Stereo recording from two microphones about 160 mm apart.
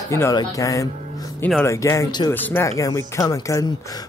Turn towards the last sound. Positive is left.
turn(degrees=20)  # may be behind; listen again after turning